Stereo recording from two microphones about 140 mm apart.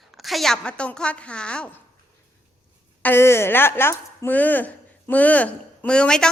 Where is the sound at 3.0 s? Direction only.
15° left (ahead or behind).